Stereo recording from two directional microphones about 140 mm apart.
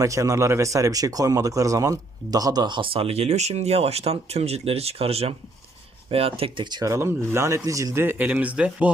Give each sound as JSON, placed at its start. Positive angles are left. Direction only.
{"t": 0.0, "sound": "speech", "side_deg": -25}
{"t": 6.9, "sound": "speech", "side_deg": -20}